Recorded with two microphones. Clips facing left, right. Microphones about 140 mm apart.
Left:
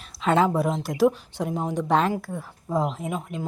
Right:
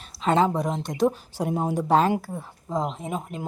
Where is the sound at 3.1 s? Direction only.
40° right (ahead or behind).